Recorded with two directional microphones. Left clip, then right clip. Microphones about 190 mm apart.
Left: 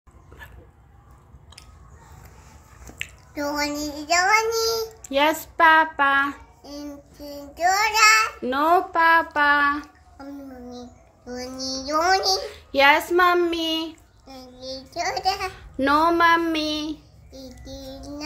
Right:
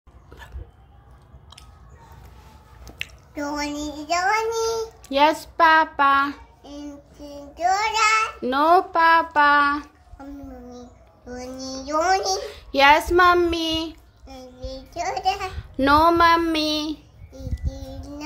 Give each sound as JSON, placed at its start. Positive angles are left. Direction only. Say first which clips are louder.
{"t": 3.3, "sound": "a child's voice", "louder": "left 2 dB", "side_deg": -5}
{"t": 8.4, "sound": "a child's voice", "louder": "right 2 dB", "side_deg": -10}
{"t": 15.5, "sound": "child singing", "louder": "right 5 dB", "side_deg": -10}
{"t": 17.6, "sound": "a child's voice", "louder": "left 3 dB", "side_deg": 5}